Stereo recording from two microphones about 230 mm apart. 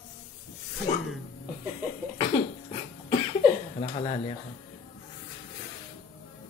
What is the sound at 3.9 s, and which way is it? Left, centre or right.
Speech, left.